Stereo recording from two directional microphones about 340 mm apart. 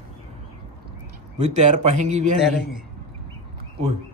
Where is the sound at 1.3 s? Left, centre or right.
Centre.